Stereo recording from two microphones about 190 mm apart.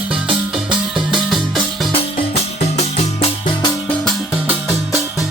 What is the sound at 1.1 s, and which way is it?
Music, 5° right (ahead or behind).